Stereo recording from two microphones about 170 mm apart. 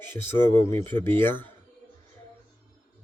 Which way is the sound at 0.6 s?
35° right (ahead or behind).